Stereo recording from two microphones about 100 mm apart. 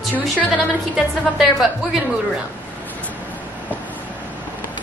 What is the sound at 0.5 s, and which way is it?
Speech, centre (ahead or behind).